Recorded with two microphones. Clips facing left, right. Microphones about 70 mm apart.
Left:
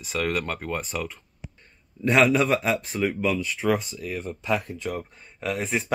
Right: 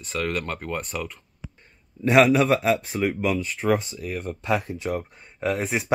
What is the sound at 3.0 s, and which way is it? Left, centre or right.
Speech, centre.